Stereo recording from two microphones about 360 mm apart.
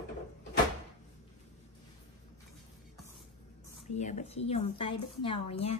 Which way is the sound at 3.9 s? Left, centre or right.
Centre.